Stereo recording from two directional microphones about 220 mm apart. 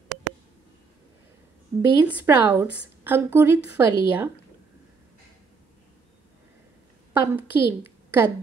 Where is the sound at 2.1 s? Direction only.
10° right (ahead or behind).